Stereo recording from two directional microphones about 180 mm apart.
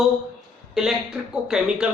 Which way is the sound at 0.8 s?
Centre (ahead or behind).